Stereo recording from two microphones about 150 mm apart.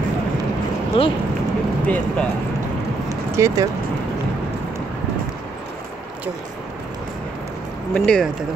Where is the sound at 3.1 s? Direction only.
20° right (ahead or behind).